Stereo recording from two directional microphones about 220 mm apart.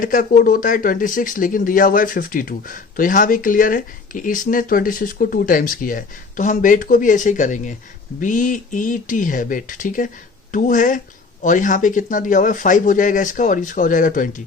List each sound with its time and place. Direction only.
0.0 s speech: 35° left (ahead or behind)